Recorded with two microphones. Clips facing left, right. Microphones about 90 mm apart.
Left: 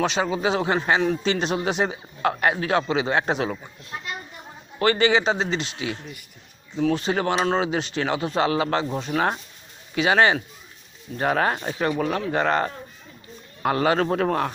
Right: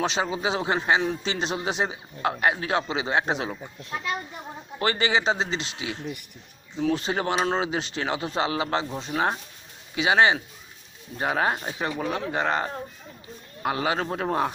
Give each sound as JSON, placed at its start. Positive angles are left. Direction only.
{"t": 0.0, "sound": "speech", "side_deg": -25}
{"t": 4.8, "sound": "speech", "side_deg": -25}
{"t": 6.7, "sound": "speech", "side_deg": 50}
{"t": 7.0, "sound": "speech", "side_deg": -25}
{"t": 9.1, "sound": "speech", "side_deg": 25}
{"t": 9.9, "sound": "speech", "side_deg": -20}
{"t": 14.3, "sound": "speech", "side_deg": -20}